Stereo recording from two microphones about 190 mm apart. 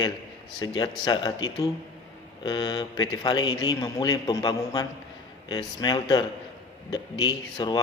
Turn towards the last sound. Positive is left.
turn(degrees=20)  # may be behind; listen again after turning